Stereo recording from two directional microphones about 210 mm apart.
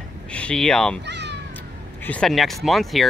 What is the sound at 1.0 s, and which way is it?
Cat, 55° right (ahead or behind).